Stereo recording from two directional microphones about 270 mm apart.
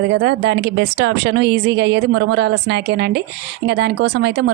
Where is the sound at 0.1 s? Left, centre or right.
Right.